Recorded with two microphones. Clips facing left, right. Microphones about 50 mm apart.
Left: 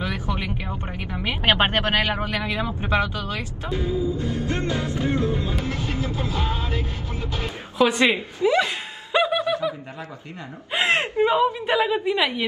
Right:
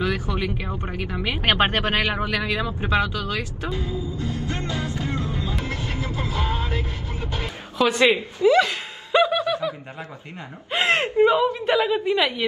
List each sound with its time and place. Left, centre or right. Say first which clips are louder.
0.0 s a sound: right 3 dB; left
1.7 s speech: left 1 dB; left
2.6 s music: even; left
6.4 s vehicle: right 1 dB; right
7.2 s music: even; right
7.8 s speech: even; centre
8.5 s a sound: right 3 dB; centre
9.4 s snicker: even; left
10.7 s speech: right 1 dB; centre